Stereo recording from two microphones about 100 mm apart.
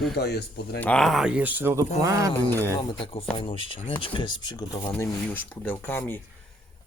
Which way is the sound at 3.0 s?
65° left (ahead or behind).